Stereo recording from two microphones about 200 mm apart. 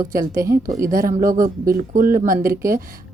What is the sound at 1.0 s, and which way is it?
Speech, 40° right (ahead or behind).